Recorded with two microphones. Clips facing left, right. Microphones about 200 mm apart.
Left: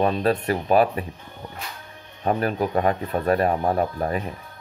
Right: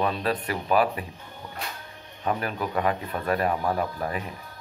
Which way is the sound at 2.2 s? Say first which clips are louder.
Left 5 dB; 40° left (ahead or behind).